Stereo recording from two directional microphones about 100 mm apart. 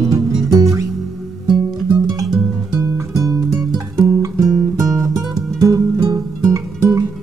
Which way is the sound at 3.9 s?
35° right (ahead or behind).